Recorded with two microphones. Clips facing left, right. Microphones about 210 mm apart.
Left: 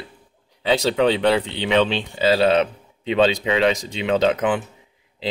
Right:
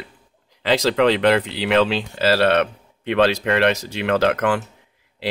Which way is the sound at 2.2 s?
75° right (ahead or behind).